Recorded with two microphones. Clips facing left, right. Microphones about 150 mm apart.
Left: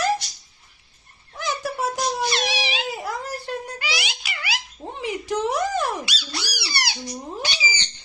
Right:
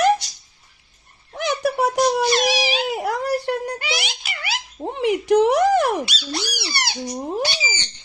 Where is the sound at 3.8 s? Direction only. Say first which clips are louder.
Right 3 dB; 50° right (ahead or behind).